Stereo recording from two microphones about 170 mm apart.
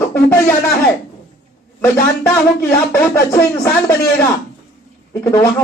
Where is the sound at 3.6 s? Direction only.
15° left (ahead or behind).